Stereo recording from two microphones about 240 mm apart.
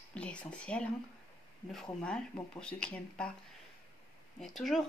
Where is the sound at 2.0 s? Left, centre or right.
Centre.